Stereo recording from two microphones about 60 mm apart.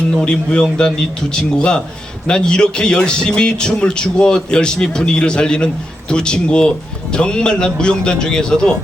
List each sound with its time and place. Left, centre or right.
0.2 s speech: centre